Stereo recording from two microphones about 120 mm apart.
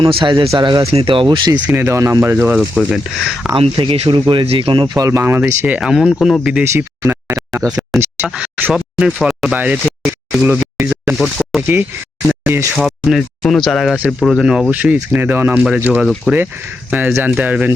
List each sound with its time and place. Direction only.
0.0 s speech: 45° right (ahead or behind)
1.5 s speech: 15° right (ahead or behind)
2.6 s speech: centre (ahead or behind)
3.5 s speech: 45° right (ahead or behind); by 6.7 s 5° right (ahead or behind)
6.7 s a sound: 20° right (ahead or behind)
7.8 s speech: 15° right (ahead or behind)
8.7 s speech: 5° right (ahead or behind)
12.7 s speech: centre (ahead or behind)